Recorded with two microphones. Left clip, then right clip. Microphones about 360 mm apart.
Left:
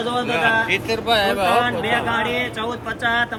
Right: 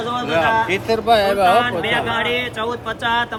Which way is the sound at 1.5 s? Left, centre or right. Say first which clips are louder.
Right 2 dB; centre.